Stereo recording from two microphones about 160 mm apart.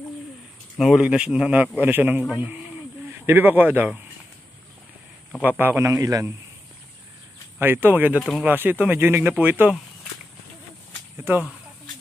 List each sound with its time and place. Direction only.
0.7 s speech: centre (ahead or behind)
5.4 s speech: 10° right (ahead or behind)
7.5 s speech: 15° right (ahead or behind)
8.2 s speech: 5° left (ahead or behind)
8.5 s speech: 10° right (ahead or behind)
11.1 s speech: 15° right (ahead or behind)